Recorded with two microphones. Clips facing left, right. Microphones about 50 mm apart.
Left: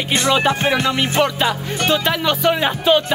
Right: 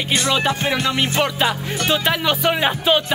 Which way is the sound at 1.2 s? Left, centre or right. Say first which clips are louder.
Left 2 dB; centre.